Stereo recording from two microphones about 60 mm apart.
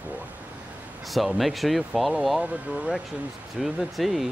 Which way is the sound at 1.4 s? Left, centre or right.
Centre.